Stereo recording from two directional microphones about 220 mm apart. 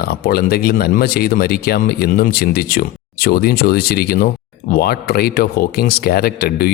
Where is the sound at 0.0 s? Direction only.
45° left (ahead or behind).